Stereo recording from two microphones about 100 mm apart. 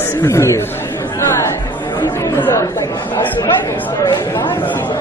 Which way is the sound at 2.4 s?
25° left (ahead or behind).